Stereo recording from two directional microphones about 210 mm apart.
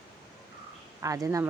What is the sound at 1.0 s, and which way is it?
Speech, 15° right (ahead or behind).